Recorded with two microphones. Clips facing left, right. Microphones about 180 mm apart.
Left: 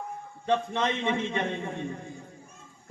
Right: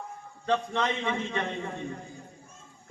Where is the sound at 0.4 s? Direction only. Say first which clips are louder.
Left 1 dB; 20° left (ahead or behind).